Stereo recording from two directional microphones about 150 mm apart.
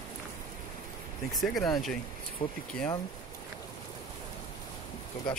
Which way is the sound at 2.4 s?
35° left (ahead or behind).